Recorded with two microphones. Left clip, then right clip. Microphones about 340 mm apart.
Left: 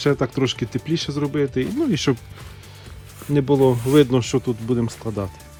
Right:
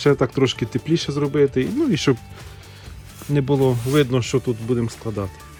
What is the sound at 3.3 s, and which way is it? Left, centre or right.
Speech, centre.